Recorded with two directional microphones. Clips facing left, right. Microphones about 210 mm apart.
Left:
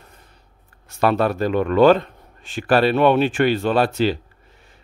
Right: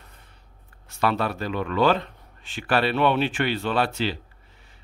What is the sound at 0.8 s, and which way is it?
Speech, 45° left (ahead or behind).